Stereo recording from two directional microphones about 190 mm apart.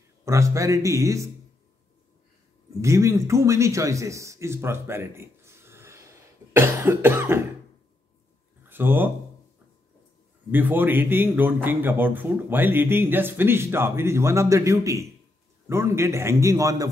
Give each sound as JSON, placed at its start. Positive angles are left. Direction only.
{"t": 0.2, "sound": "speech", "side_deg": -15}
{"t": 2.8, "sound": "a man's voice", "side_deg": -15}
{"t": 8.6, "sound": "speech", "side_deg": -10}
{"t": 10.5, "sound": "speech", "side_deg": -10}